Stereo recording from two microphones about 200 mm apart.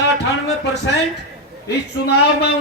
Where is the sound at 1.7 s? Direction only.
55° left (ahead or behind).